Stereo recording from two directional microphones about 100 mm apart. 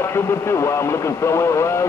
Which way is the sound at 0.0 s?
25° left (ahead or behind).